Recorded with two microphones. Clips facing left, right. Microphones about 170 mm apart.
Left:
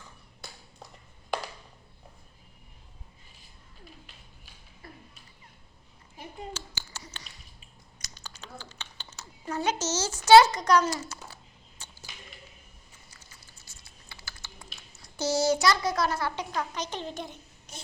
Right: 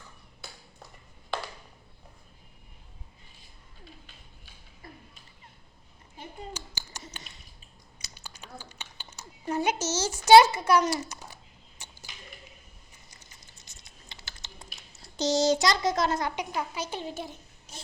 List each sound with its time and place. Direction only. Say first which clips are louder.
6.5 s a sound: left 1 dB; 15° right (ahead or behind)
11.8 s whip: even; 15° right (ahead or behind)
13.1 s typing: even; 20° right (ahead or behind)